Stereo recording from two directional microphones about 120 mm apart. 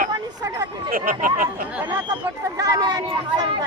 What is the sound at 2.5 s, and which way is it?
Speech, 35° right (ahead or behind).